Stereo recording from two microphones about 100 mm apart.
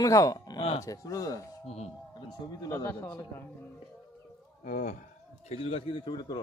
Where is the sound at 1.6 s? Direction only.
90° left.